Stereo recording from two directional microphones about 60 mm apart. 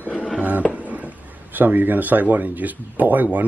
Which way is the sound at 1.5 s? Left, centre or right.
Right.